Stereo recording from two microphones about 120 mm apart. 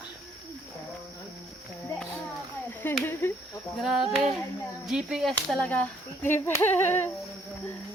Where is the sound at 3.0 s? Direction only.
20° left (ahead or behind).